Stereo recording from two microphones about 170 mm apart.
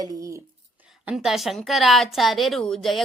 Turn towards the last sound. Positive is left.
turn(degrees=0)  # may be behind; listen again after turning